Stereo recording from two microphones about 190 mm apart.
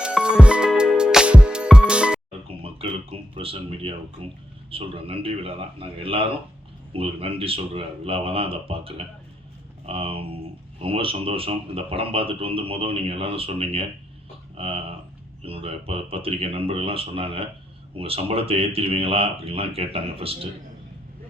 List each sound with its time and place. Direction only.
0.0 s music: 5° right (ahead or behind)
2.7 s speech: 30° right (ahead or behind)